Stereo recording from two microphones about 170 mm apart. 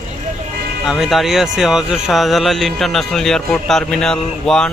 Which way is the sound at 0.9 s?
Centre (ahead or behind).